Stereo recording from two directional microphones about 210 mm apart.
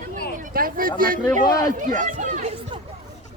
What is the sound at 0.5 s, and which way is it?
Speech, 45° right (ahead or behind).